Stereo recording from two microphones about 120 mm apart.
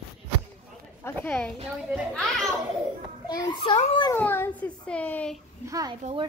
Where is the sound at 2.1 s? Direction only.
Centre (ahead or behind).